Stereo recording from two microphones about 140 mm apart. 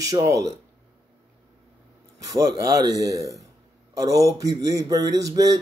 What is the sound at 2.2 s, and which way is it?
Speech, 25° right (ahead or behind).